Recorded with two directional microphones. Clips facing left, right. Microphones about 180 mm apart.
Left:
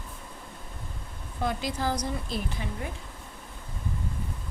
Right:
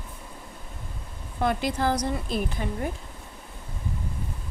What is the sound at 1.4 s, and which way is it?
A woman's voice, 60° right (ahead or behind).